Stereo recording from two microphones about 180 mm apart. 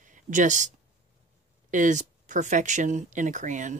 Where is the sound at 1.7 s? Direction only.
45° right (ahead or behind).